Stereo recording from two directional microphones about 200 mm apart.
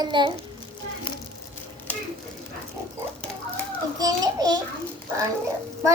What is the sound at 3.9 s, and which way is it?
Speech, 20° right (ahead or behind).